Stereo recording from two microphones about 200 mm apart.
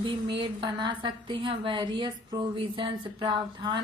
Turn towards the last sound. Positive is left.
turn(degrees=-25)  # may be behind; listen again after turning